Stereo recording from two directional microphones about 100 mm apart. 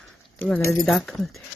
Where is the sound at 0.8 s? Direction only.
Centre (ahead or behind).